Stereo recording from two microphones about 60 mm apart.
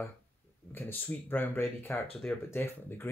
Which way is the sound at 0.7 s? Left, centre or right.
Left.